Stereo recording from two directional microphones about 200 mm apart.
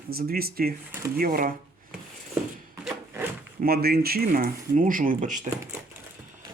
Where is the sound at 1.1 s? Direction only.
45° right (ahead or behind).